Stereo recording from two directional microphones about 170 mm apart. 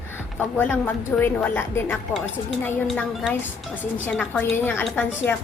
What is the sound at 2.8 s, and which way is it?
A woman's voice, centre (ahead or behind).